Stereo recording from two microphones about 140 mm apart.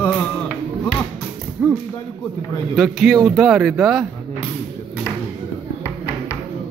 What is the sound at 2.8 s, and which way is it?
Speech, 5° right (ahead or behind).